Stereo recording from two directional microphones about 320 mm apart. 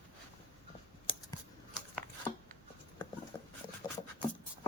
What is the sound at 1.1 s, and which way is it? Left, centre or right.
Scissors, centre.